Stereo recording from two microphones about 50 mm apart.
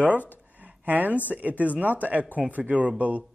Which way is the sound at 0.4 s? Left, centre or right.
Right.